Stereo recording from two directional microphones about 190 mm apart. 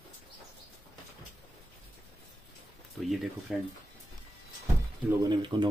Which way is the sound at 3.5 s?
5° right (ahead or behind).